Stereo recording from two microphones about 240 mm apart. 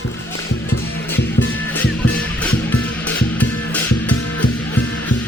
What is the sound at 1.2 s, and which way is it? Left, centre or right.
Music, left.